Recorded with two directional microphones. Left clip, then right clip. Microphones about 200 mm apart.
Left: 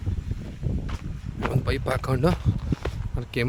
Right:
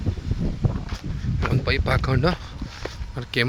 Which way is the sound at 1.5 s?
15° left (ahead or behind).